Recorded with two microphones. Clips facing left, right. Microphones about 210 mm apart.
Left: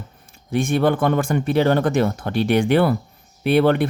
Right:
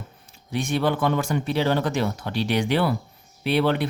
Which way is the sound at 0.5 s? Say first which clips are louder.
Left 5 dB; 50° left (ahead or behind).